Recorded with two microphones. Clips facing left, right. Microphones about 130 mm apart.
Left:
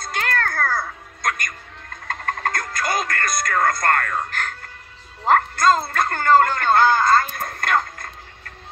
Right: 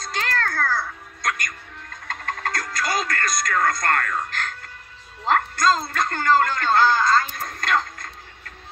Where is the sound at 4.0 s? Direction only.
35° left (ahead or behind).